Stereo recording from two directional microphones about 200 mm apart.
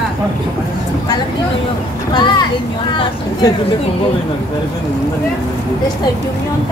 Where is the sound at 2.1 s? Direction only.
25° left (ahead or behind).